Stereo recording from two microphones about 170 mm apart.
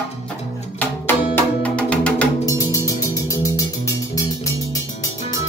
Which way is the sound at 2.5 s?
20° left (ahead or behind).